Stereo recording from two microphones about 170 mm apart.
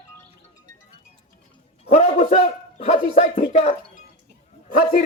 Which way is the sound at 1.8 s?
40° left (ahead or behind).